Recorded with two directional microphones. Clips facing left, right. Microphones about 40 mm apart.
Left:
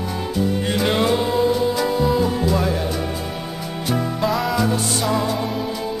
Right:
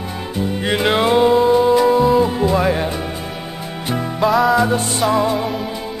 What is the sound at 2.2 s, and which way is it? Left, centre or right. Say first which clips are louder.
Music: right 4 dB; right.